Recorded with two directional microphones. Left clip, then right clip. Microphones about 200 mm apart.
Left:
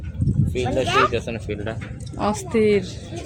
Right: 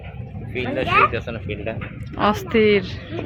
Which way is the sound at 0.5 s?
55° left (ahead or behind).